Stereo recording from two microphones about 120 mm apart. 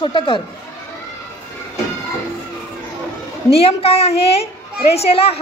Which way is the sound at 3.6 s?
55° left (ahead or behind).